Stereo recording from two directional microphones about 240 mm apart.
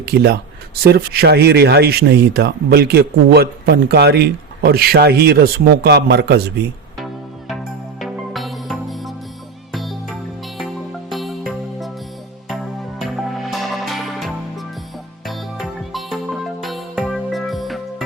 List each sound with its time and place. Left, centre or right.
0.0 s speech: right
7.0 s music: centre
11.1 s music: centre
13.5 s music: centre